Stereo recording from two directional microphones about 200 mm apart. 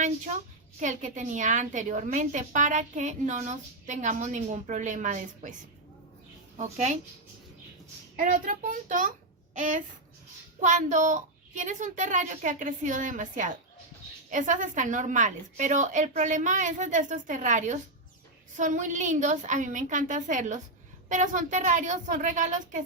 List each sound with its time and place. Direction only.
0.8 s a woman's voice: 40° right (ahead or behind)
6.6 s a woman's voice: 35° right (ahead or behind)
8.1 s a woman's voice: 45° right (ahead or behind)